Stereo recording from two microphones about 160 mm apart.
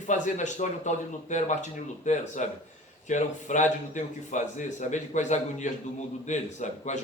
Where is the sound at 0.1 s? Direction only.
50° left (ahead or behind).